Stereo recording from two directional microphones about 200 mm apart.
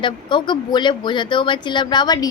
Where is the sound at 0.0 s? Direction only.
25° left (ahead or behind).